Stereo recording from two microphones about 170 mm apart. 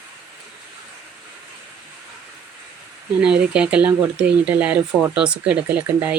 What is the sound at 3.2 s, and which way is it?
Speech, 5° right (ahead or behind).